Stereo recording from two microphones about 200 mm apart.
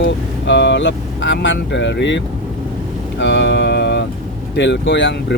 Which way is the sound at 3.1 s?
60° left (ahead or behind).